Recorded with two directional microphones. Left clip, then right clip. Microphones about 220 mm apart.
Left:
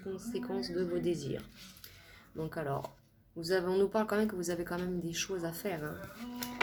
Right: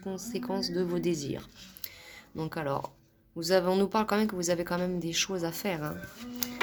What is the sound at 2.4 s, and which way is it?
A woman's voice, 40° right (ahead or behind).